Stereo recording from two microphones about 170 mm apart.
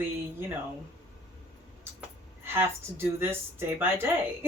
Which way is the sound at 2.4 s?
15° right (ahead or behind).